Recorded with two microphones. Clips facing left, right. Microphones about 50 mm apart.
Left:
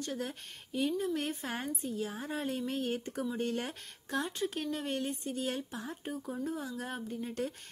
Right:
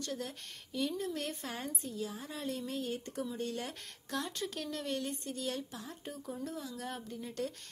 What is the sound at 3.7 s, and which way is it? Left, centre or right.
A woman's voice, centre.